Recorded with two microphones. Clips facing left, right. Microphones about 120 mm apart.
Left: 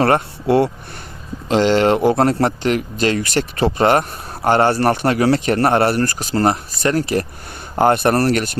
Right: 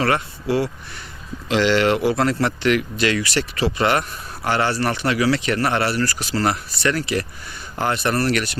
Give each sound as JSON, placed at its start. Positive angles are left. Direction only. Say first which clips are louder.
{"t": 0.0, "sound": "speech", "louder": "left 5 dB", "side_deg": 50}
{"t": 1.5, "sound": "a man's voice", "louder": "left 3 dB", "side_deg": 40}